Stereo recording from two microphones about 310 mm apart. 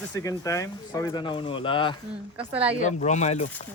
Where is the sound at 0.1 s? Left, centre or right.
Centre.